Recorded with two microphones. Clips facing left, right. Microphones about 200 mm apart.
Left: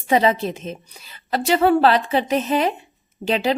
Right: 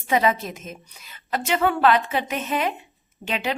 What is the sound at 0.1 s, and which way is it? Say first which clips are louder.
A woman's voice: left 4 dB; 30° left (ahead or behind).